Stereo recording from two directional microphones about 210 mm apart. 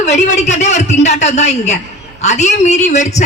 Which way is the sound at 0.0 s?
30° left (ahead or behind).